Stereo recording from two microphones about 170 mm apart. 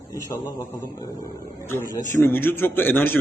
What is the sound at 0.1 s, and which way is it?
Speech, 20° left (ahead or behind).